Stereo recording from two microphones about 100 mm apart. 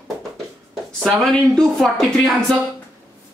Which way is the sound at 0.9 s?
5° left (ahead or behind).